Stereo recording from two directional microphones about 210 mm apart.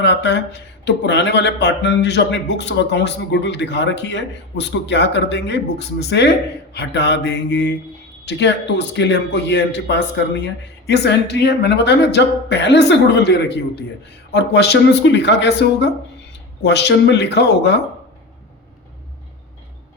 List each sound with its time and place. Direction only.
0.0 s speech: 55° left (ahead or behind)